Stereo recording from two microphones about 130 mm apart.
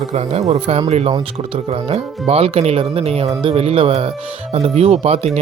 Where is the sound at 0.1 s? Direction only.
55° right (ahead or behind).